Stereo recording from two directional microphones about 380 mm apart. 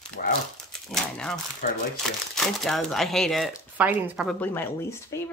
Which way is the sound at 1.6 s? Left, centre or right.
Left.